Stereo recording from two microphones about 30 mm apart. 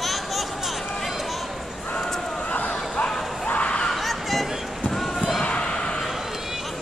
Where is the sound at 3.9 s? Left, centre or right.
Centre.